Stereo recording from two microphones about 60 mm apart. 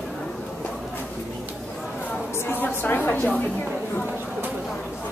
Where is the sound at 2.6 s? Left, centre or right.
Left.